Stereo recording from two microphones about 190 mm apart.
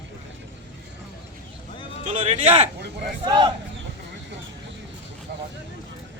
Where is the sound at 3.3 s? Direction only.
25° right (ahead or behind).